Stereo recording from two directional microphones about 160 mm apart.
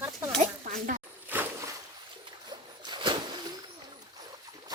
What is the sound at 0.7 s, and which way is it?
Zipper, 60° right (ahead or behind).